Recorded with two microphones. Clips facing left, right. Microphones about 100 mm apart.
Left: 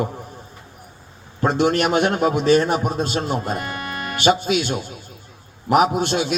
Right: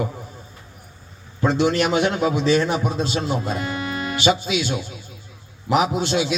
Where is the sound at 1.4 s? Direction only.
50° left (ahead or behind).